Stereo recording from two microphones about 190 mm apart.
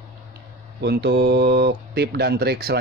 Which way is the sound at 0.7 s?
60° right (ahead or behind).